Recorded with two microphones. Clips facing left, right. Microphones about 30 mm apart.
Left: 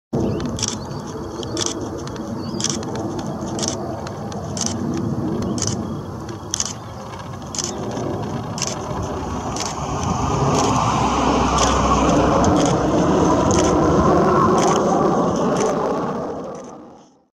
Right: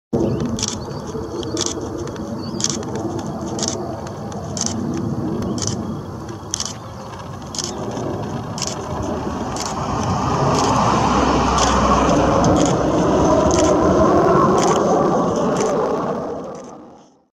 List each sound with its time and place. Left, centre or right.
0.1 s a sound: centre
7.8 s vehicle: centre
9.2 s vehicle: right
10.6 s vehicle: right
11.7 s vehicle: right
12.1 s vehicle: centre
14.7 s a sound: centre